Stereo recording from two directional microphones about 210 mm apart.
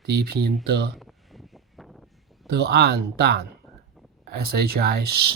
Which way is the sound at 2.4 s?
50° right (ahead or behind).